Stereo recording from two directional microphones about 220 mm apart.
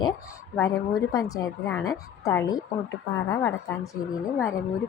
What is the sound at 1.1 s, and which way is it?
Speech, 15° left (ahead or behind).